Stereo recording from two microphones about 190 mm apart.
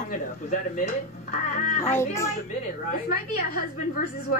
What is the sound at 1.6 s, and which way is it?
Speech, 40° left (ahead or behind).